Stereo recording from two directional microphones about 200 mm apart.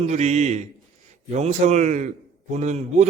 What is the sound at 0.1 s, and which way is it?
A man's voice, 35° right (ahead or behind).